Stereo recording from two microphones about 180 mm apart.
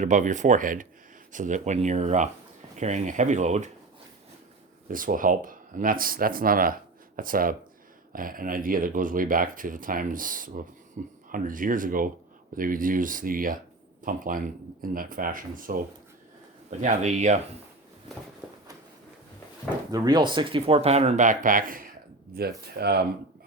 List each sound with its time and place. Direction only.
0.0 s speech: 45° right (ahead or behind)
4.9 s speech: 50° right (ahead or behind)
19.9 s speech: 25° right (ahead or behind); by 21.8 s 50° right (ahead or behind)
22.4 s speech: 60° right (ahead or behind)